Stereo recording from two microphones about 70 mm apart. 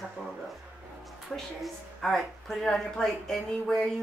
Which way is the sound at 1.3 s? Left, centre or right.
Centre.